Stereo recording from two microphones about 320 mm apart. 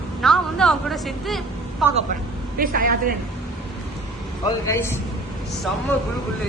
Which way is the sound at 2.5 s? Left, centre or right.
Right.